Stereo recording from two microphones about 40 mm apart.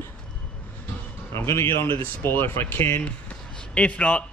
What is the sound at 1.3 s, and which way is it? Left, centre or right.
Speech, left.